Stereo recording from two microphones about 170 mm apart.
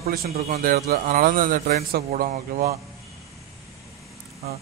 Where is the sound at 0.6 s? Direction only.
55° right (ahead or behind); by 2.8 s 40° right (ahead or behind).